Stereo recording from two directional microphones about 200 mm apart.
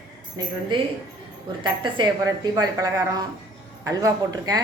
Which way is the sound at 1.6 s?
20° right (ahead or behind).